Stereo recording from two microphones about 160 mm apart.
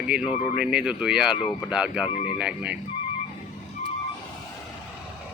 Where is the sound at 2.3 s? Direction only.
5° right (ahead or behind).